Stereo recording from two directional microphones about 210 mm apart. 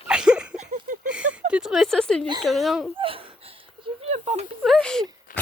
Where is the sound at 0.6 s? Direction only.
40° right (ahead or behind).